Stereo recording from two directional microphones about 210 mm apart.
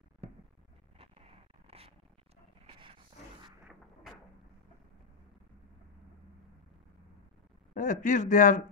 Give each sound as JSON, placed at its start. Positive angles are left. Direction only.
{"t": 0.9, "sound": "a sound", "side_deg": -25}
{"t": 2.6, "sound": "dog", "side_deg": -25}
{"t": 7.7, "sound": "speech", "side_deg": 40}